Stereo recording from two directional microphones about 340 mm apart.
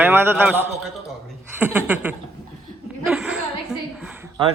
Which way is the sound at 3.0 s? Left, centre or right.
Centre.